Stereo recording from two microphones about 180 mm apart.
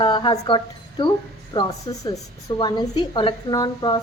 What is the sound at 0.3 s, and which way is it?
A woman's voice, 25° left (ahead or behind).